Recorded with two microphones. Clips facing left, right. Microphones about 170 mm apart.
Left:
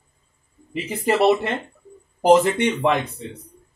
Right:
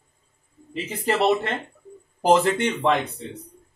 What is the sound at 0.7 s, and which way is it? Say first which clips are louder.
Speech: left 3 dB; 15° left (ahead or behind).